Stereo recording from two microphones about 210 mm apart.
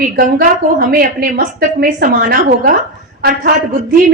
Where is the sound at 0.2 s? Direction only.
45° right (ahead or behind).